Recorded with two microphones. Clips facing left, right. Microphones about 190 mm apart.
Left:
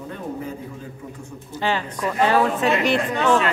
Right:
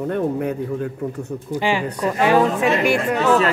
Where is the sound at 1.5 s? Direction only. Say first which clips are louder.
Right 3 dB; 10° right (ahead or behind).